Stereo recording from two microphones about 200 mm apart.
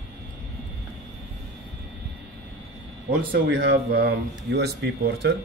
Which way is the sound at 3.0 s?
55° right (ahead or behind).